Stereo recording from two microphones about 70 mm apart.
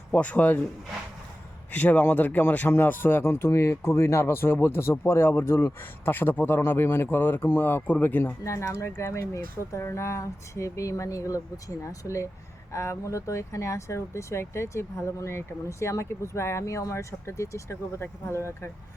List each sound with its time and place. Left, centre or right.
0.1 s speech: centre
1.7 s speech: left
8.4 s speech: left